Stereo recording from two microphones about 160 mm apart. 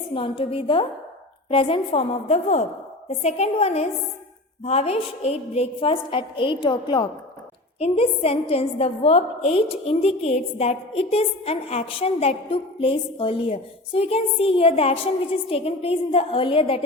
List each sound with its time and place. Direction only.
0.1 s a woman's voice: 35° left (ahead or behind)